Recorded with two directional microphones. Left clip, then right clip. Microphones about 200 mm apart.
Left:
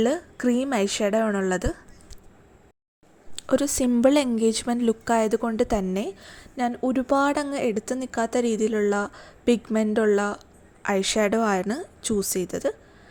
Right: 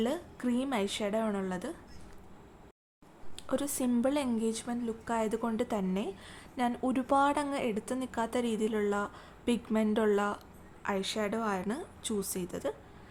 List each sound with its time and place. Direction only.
0.0 s a woman's voice: 25° left (ahead or behind)
3.3 s a woman's voice: 30° left (ahead or behind)
10.8 s a woman's voice: 30° left (ahead or behind)